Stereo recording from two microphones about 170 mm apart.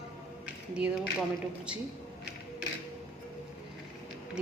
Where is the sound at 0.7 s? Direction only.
5° right (ahead or behind).